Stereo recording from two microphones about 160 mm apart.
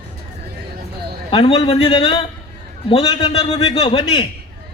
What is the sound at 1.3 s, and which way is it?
A man's voice, 35° left (ahead or behind).